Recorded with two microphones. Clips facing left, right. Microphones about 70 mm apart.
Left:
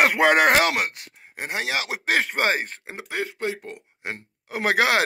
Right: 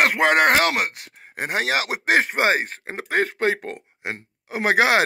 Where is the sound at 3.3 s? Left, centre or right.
Right.